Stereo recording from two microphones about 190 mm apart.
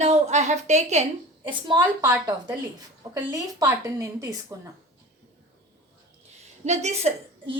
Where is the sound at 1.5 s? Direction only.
25° right (ahead or behind).